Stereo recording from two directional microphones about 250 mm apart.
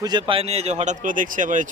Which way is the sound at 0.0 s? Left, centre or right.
Centre.